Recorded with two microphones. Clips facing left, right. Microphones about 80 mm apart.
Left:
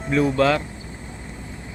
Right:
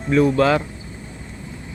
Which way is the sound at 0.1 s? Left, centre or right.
Centre.